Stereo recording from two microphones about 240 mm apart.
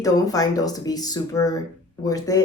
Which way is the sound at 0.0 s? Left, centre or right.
Centre.